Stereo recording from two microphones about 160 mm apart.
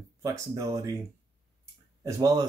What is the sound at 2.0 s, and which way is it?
Speech, 20° right (ahead or behind).